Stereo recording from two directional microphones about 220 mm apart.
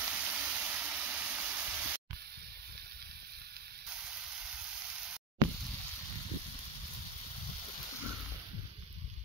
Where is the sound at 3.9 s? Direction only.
5° right (ahead or behind).